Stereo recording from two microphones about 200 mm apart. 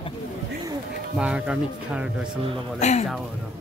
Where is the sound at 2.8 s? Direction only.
35° left (ahead or behind).